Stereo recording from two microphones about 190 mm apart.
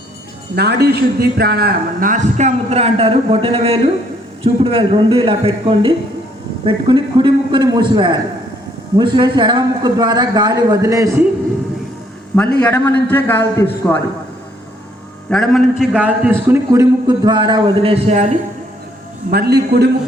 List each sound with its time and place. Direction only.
0.5 s a man's voice: 60° right (ahead or behind); by 11.2 s 15° right (ahead or behind)
12.5 s a man's voice: 10° left (ahead or behind)
15.3 s a man's voice: centre (ahead or behind); by 18.3 s 35° right (ahead or behind)
19.3 s a man's voice: 55° right (ahead or behind)